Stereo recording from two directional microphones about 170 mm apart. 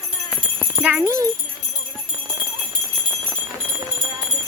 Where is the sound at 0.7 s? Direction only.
10° right (ahead or behind).